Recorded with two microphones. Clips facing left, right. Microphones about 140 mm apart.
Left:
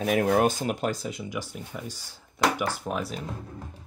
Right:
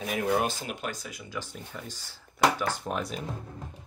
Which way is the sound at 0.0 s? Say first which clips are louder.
Left 5 dB; 50° left (ahead or behind).